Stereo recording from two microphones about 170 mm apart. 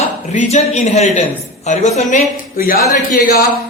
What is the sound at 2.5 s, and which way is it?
Speech, 60° left (ahead or behind).